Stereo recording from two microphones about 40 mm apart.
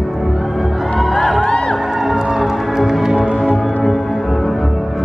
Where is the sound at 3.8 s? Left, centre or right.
Centre.